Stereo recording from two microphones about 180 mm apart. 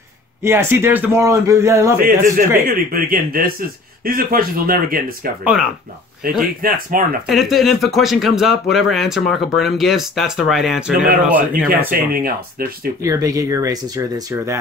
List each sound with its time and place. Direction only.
0.4 s speech: 15° right (ahead or behind)
2.0 s speech: 55° right (ahead or behind)
5.4 s speech: 5° right (ahead or behind)
6.9 s speech: 50° right (ahead or behind)
7.2 s speech: centre (ahead or behind)
11.9 s speech: 55° right (ahead or behind)
13.0 s speech: 20° right (ahead or behind)